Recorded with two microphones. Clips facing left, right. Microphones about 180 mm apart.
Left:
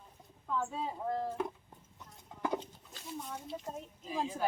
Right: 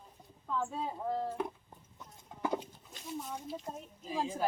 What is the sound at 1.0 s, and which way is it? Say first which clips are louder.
Speech: even; centre (ahead or behind).